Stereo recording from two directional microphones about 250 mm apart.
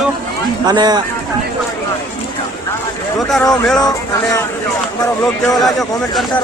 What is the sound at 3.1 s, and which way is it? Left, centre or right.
Speech, centre.